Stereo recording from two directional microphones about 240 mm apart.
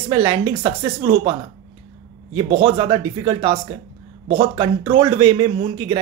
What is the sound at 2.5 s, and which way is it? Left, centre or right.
Speech, centre.